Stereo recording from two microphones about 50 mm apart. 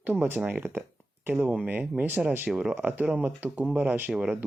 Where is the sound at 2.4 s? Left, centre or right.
Right.